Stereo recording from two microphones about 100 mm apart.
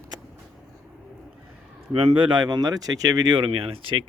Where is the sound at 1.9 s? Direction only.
70° right (ahead or behind).